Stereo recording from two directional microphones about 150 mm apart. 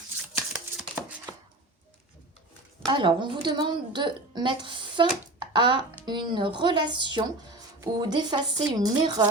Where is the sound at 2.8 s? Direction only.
30° right (ahead or behind).